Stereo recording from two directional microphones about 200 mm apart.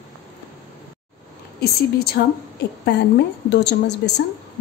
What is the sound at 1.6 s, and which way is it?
A woman's voice, 55° left (ahead or behind).